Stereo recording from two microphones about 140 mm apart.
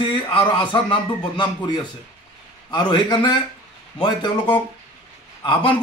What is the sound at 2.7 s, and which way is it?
A man's voice, 35° left (ahead or behind).